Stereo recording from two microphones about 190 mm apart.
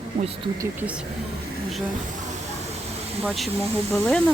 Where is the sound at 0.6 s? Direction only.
10° right (ahead or behind).